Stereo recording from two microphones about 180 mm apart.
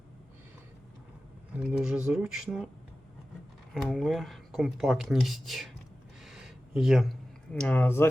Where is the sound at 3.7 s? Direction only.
Centre (ahead or behind).